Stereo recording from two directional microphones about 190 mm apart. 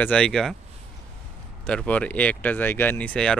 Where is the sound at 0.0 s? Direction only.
5° left (ahead or behind).